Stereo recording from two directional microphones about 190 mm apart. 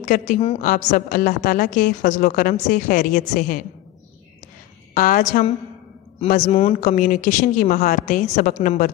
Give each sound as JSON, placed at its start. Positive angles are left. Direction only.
{"t": 0.1, "sound": "a woman's voice", "side_deg": 45}
{"t": 4.9, "sound": "a woman's voice", "side_deg": 45}